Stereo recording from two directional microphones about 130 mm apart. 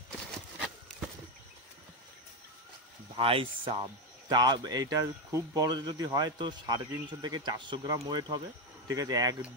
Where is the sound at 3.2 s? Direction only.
45° right (ahead or behind).